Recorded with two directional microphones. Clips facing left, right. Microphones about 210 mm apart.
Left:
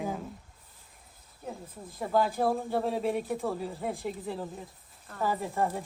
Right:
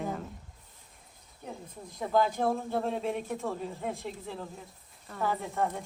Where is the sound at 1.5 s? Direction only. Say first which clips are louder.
Left 2 dB; 5° left (ahead or behind).